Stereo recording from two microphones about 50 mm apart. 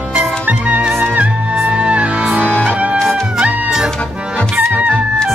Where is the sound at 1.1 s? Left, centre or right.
Right.